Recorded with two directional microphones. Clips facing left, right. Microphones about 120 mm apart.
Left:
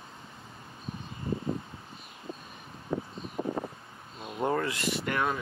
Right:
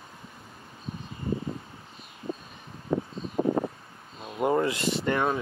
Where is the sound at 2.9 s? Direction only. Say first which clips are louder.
Right 5 dB; 80° right.